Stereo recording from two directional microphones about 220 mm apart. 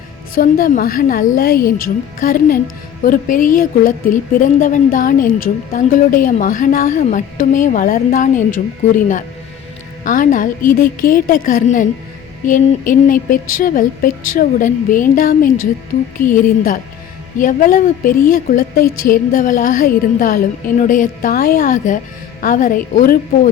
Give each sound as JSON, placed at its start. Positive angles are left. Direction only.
{"t": 0.3, "sound": "speech", "side_deg": 40}
{"t": 10.0, "sound": "speech", "side_deg": 35}